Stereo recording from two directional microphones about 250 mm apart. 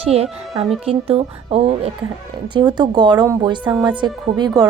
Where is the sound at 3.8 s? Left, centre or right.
Centre.